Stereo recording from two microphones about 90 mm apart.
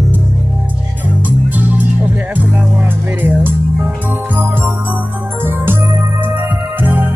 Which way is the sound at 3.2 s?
20° right (ahead or behind).